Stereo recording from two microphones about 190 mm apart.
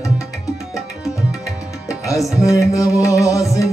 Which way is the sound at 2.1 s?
15° left (ahead or behind).